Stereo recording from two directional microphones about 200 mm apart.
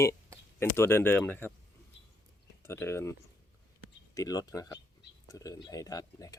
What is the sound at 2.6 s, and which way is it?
Speech, 15° left (ahead or behind).